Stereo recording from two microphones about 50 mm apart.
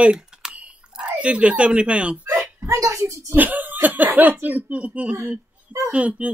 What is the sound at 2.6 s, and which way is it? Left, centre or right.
Speech, right.